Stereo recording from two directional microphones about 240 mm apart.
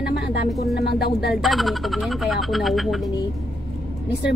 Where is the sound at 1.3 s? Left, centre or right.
Centre.